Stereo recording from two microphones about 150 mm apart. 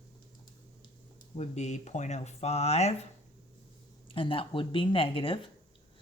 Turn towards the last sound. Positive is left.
turn(degrees=35)  # may be behind; listen again after turning